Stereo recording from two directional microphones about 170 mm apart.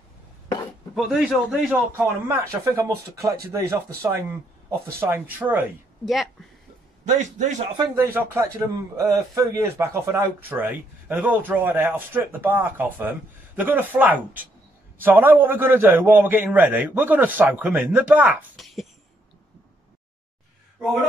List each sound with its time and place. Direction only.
0.9 s speech: centre (ahead or behind)
2.0 s a man's voice: 15° right (ahead or behind)
7.1 s a man's voice: 45° right (ahead or behind)
7.9 s a man's voice: 15° right (ahead or behind)